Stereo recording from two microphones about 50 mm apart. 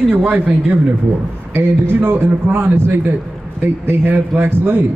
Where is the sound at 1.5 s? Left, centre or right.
Right.